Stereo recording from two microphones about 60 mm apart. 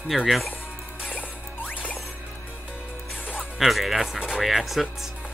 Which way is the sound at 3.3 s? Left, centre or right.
Centre.